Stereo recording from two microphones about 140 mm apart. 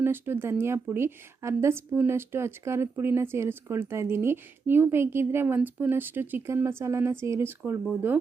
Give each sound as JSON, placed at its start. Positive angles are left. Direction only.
{"t": 0.0, "sound": "speech", "side_deg": -15}